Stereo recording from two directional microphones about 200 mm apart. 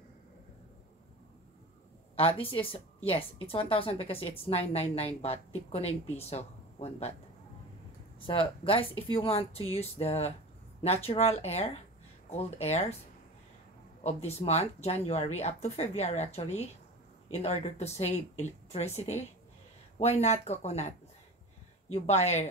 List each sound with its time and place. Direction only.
2.1 s a woman's voice: 30° left (ahead or behind)
8.3 s a woman's voice: 25° left (ahead or behind)
14.0 s speech: 30° left (ahead or behind)